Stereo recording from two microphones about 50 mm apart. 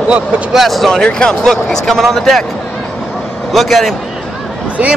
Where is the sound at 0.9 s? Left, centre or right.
Centre.